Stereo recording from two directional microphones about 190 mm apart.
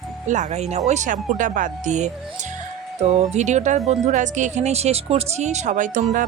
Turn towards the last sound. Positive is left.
turn(degrees=-40)  # may be behind; listen again after turning